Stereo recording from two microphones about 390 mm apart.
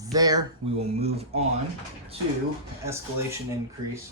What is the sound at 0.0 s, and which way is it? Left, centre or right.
Speech, centre.